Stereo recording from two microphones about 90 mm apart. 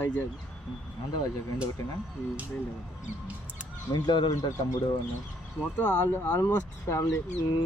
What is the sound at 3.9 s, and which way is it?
Speech, 60° left (ahead or behind).